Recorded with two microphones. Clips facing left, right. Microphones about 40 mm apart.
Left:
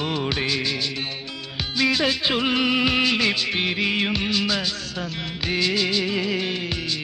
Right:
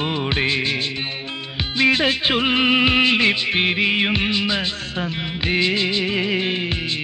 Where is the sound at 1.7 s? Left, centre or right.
Right.